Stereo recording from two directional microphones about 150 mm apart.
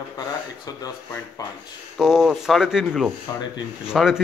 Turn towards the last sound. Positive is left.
turn(degrees=-5)  # may be behind; listen again after turning